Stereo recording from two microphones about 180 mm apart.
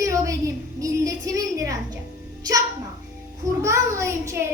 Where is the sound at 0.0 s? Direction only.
15° right (ahead or behind).